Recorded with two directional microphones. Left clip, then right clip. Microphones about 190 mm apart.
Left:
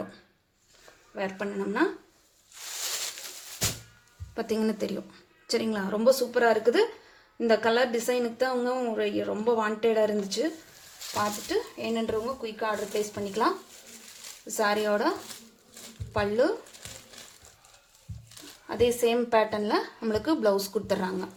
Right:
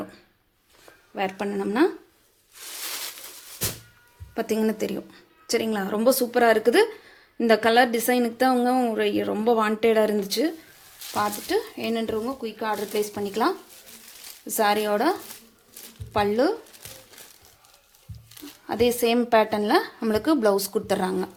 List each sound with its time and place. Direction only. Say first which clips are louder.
1.1 s speech: right 5 dB; 45° right (ahead or behind)
4.4 s a woman's voice: right 4 dB; 30° right (ahead or behind)
16.1 s a woman's voice: right 3 dB; 40° right (ahead or behind)
18.7 s a woman's voice: right 3 dB; 40° right (ahead or behind)